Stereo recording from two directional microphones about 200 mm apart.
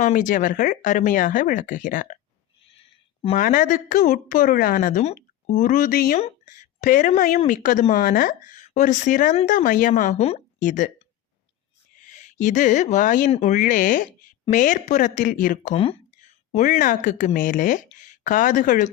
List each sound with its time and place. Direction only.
0.0 s a woman's voice: 40° left (ahead or behind)
2.7 s a sound: 30° left (ahead or behind)
3.3 s a woman's voice: 40° left (ahead or behind)
6.1 s a woman's voice: 35° left (ahead or behind)
12.0 s a woman's voice: 35° left (ahead or behind)